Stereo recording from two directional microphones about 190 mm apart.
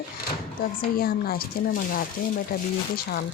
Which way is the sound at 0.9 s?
50° left (ahead or behind).